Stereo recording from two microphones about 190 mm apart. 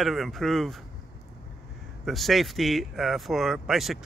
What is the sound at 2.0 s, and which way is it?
Speech, centre (ahead or behind).